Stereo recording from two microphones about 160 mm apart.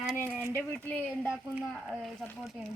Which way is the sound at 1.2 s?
5° right (ahead or behind).